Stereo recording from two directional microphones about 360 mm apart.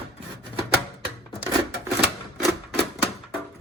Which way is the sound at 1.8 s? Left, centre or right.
Centre.